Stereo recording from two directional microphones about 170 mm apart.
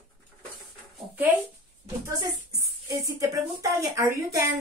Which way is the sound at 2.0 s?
20° right (ahead or behind).